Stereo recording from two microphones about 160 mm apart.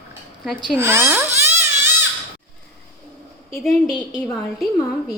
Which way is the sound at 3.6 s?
Centre (ahead or behind).